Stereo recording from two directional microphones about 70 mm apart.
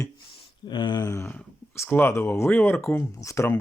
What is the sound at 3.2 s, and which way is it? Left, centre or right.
Speech, left.